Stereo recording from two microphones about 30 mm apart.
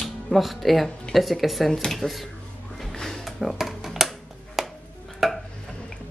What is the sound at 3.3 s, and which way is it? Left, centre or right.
Music, centre.